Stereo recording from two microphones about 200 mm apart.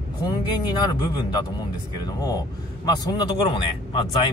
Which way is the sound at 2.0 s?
20° left (ahead or behind).